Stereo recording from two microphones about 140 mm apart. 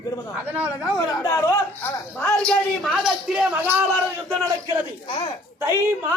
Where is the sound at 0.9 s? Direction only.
20° left (ahead or behind).